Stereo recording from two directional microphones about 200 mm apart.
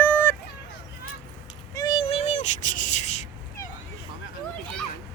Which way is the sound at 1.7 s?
20° left (ahead or behind).